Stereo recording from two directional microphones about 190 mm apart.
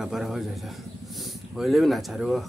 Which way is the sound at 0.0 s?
Centre (ahead or behind).